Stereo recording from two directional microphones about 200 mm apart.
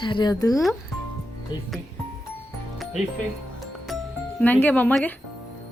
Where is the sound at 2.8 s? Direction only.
Centre (ahead or behind).